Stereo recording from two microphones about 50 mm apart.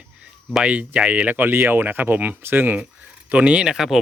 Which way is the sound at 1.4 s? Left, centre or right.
Right.